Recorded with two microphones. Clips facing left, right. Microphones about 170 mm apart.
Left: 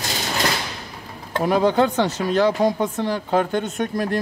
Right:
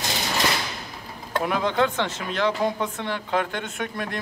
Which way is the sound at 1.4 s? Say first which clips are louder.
Left 6 dB; 35° left (ahead or behind).